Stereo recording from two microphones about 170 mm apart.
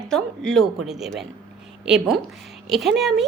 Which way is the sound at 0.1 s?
5° left (ahead or behind).